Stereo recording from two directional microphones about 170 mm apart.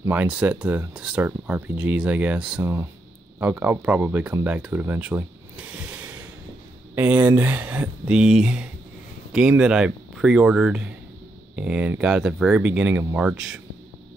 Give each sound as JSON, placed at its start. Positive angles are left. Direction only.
{"t": 0.0, "sound": "speech", "side_deg": -10}